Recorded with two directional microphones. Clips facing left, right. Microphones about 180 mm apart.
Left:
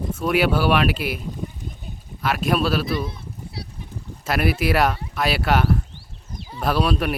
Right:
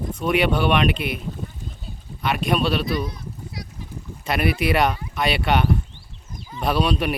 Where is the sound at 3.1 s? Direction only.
30° left (ahead or behind).